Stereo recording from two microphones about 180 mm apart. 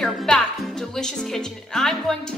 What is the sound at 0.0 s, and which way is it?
Speech, centre (ahead or behind).